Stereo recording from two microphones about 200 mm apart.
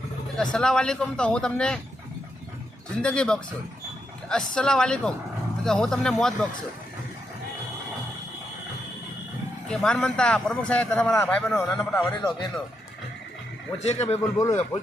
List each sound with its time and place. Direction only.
0.5 s speech: 5° left (ahead or behind)
2.9 s speech: 5° left (ahead or behind)
9.6 s speech: 5° left (ahead or behind)
13.7 s speech: 35° left (ahead or behind)
14.2 s speech: 15° left (ahead or behind)